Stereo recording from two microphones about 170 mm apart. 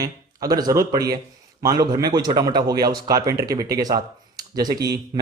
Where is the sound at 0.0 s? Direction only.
20° right (ahead or behind).